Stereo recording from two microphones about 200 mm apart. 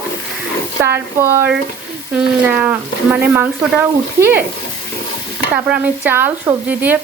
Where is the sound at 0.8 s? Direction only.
10° right (ahead or behind).